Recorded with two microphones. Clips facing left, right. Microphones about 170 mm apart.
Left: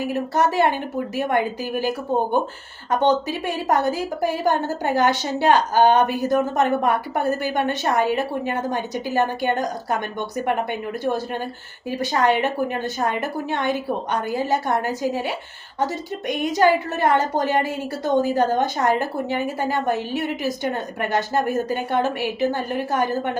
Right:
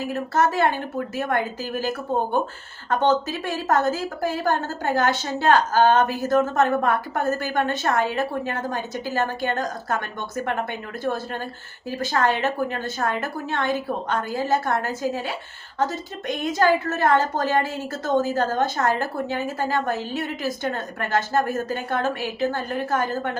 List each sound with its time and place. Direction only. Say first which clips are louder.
0.0 s a woman's voice: left 1 dB; 15° left (ahead or behind)